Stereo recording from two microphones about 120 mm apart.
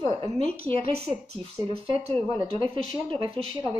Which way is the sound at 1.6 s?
25° right (ahead or behind).